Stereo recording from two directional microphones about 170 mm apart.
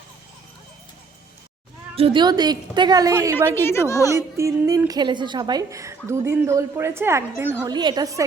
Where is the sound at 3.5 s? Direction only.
15° left (ahead or behind).